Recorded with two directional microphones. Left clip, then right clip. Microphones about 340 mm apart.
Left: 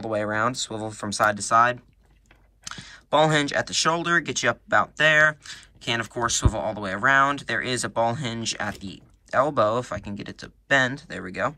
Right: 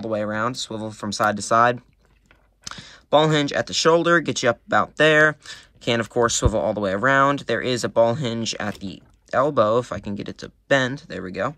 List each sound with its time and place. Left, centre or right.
0.0 s speech: centre